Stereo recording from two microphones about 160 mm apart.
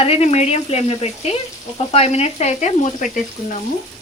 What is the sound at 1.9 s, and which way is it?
Frying, 40° left (ahead or behind).